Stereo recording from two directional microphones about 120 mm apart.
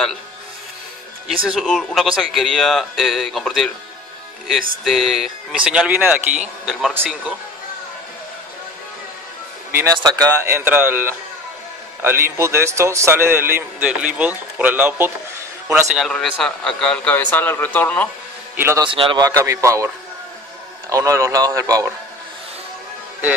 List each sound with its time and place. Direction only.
1.2 s speech: centre (ahead or behind)
9.7 s speech: 20° right (ahead or behind)
9.9 s a man's voice: 30° right (ahead or behind)
16.1 s a man's voice: 5° left (ahead or behind)
18.6 s a man's voice: 20° right (ahead or behind)
18.9 s speech: 45° right (ahead or behind)
19.2 s a man's voice: 25° right (ahead or behind)
20.9 s a man's voice: 25° right (ahead or behind)